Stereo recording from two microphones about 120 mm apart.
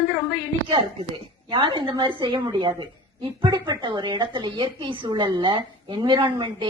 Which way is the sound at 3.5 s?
30° right (ahead or behind).